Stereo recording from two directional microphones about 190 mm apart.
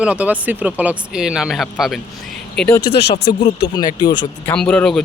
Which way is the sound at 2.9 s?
60° left (ahead or behind).